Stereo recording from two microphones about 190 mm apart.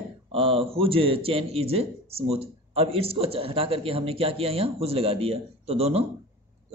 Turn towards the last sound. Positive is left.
turn(degrees=-35)  # may be behind; listen again after turning